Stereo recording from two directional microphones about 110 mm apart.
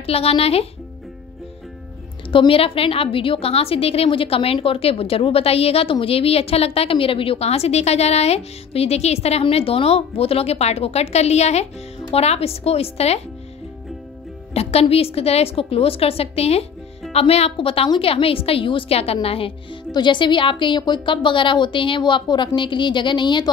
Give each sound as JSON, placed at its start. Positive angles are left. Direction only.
{"t": 0.0, "sound": "a woman's voice", "side_deg": 65}
{"t": 2.3, "sound": "a woman's voice", "side_deg": 55}
{"t": 12.1, "sound": "speech", "side_deg": 65}
{"t": 14.5, "sound": "a woman's voice", "side_deg": 65}
{"t": 19.9, "sound": "a woman's voice", "side_deg": 45}